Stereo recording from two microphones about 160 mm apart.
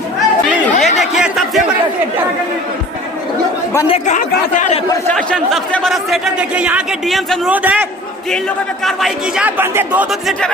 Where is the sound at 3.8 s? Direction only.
45° left (ahead or behind).